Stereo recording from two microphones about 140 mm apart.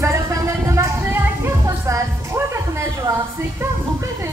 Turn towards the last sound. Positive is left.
turn(degrees=-20)  # may be behind; listen again after turning